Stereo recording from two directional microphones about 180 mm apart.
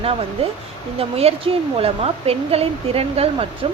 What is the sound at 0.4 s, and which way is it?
Speech, 35° right (ahead or behind).